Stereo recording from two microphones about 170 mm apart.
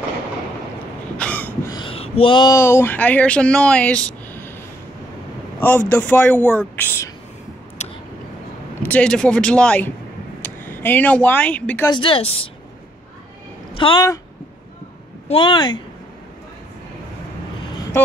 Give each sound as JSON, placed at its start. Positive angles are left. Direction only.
{"t": 1.1, "sound": "throat clearing", "side_deg": 10}
{"t": 1.7, "sound": "speech", "side_deg": 30}
{"t": 5.6, "sound": "a man's voice", "side_deg": 10}
{"t": 7.8, "sound": "a sound", "side_deg": 40}
{"t": 8.8, "sound": "a man's voice", "side_deg": 5}
{"t": 11.9, "sound": "speech", "side_deg": 30}
{"t": 13.7, "sound": "speech", "side_deg": 30}
{"t": 15.2, "sound": "speech", "side_deg": 30}